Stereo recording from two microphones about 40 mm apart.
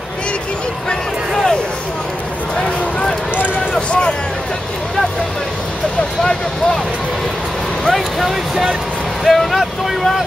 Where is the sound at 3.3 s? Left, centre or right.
Left.